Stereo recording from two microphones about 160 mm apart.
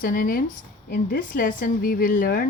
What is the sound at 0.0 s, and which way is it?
Speech, 65° left (ahead or behind).